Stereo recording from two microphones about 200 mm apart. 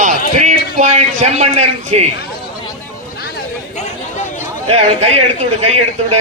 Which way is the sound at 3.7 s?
35° left (ahead or behind).